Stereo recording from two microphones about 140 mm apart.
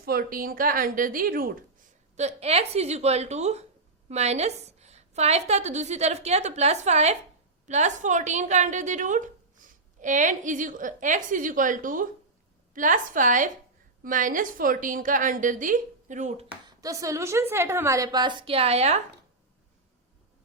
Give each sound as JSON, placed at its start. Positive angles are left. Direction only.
{"t": 0.0, "sound": "a woman's voice", "side_deg": -90}
{"t": 2.1, "sound": "a woman's voice", "side_deg": -50}
{"t": 16.6, "sound": "a woman's voice", "side_deg": -25}